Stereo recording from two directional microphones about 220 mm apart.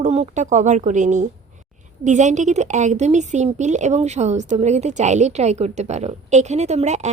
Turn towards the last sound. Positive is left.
turn(degrees=-30)  # may be behind; listen again after turning